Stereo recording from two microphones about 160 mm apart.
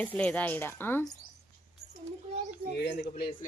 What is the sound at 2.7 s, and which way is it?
Speech, 90° left.